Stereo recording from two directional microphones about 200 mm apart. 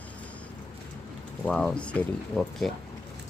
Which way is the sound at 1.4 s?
5° left (ahead or behind).